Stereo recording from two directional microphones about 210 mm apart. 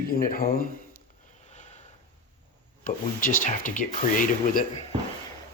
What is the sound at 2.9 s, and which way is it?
Speech, 40° left (ahead or behind).